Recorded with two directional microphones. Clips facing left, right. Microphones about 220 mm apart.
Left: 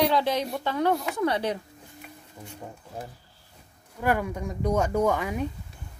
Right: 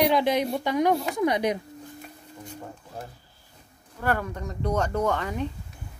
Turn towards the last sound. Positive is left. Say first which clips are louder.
# left 2 dB
turn(degrees=10)  # may be behind; listen again after turning